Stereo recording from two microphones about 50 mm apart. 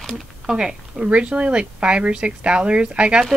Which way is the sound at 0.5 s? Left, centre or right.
Centre.